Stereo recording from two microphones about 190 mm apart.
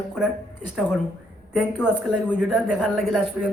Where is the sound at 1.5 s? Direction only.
5° right (ahead or behind).